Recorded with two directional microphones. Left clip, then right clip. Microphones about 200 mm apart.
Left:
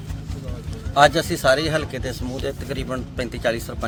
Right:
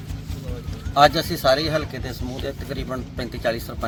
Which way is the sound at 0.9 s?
5° left (ahead or behind).